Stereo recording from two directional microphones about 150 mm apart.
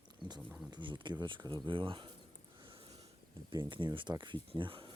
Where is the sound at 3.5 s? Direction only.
30° right (ahead or behind).